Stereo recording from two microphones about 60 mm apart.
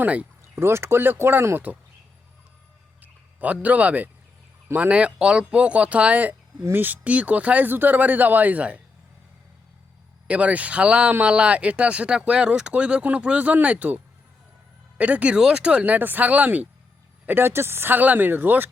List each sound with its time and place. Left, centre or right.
0.0 s speech: right
0.5 s speech: right
3.0 s a man's voice: right
10.2 s speech: right
15.8 s speech: right
17.2 s speech: right